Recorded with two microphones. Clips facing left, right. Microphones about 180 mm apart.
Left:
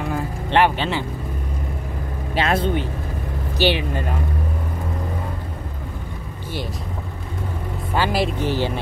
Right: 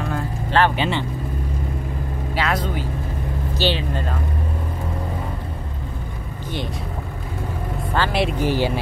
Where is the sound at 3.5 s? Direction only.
15° left (ahead or behind).